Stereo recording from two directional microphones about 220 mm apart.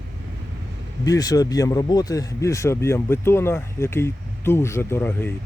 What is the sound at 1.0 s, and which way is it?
Speech, 15° left (ahead or behind).